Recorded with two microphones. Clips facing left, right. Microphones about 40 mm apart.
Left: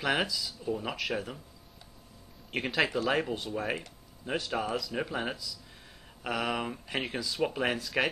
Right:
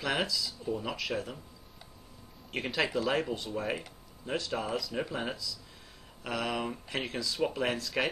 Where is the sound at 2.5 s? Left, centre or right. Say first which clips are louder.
Left 2 dB; centre.